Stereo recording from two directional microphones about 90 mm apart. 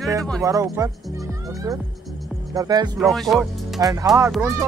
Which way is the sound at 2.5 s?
45° right (ahead or behind).